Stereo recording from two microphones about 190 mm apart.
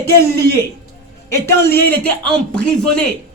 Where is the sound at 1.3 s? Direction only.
10° left (ahead or behind).